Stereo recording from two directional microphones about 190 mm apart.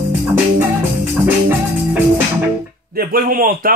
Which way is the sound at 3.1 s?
50° right (ahead or behind).